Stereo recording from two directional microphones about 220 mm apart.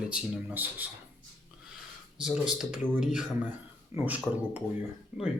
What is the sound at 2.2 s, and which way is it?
Speech, 5° right (ahead or behind).